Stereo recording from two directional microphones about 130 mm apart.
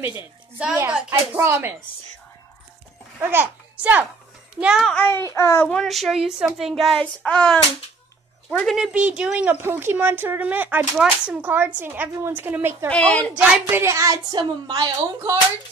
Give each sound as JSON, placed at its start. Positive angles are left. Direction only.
{"t": 1.3, "sound": "speech", "side_deg": -20}
{"t": 3.2, "sound": "a child's voice", "side_deg": -15}
{"t": 4.6, "sound": "child singing", "side_deg": -5}
{"t": 4.9, "sound": "a child's voice", "side_deg": 20}
{"t": 5.7, "sound": "child singing", "side_deg": 0}
{"t": 8.5, "sound": "speech", "side_deg": 10}
{"t": 8.7, "sound": "speech", "side_deg": -5}
{"t": 12.8, "sound": "a woman's voice", "side_deg": 10}
{"t": 13.4, "sound": "a child's voice", "side_deg": -15}